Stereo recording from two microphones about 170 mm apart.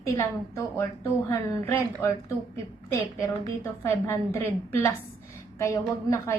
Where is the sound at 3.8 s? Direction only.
15° left (ahead or behind).